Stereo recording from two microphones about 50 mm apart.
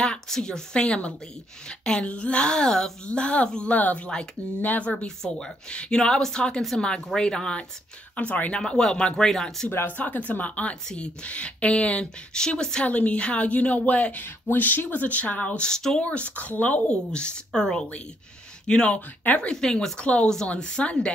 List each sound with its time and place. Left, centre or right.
0.0 s a woman's voice: centre
3.1 s a woman's voice: left
4.9 s speech: centre
8.2 s a woman's voice: left
8.5 s speech: centre
9.8 s a woman's voice: left; by 12.8 s centre
12.8 s a woman's voice: left
15.6 s speech: centre
16.0 s a woman's voice: left
16.9 s a woman's voice: centre
18.9 s speech: left
19.5 s speech: centre
20.0 s a woman's voice: left